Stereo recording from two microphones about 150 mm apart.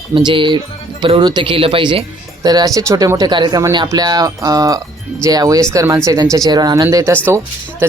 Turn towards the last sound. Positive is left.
turn(degrees=-20)  # may be behind; listen again after turning